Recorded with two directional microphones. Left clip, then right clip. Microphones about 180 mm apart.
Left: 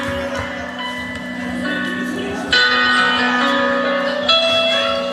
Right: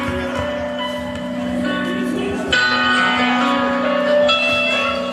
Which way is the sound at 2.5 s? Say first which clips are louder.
Left 2 dB; 35° right (ahead or behind).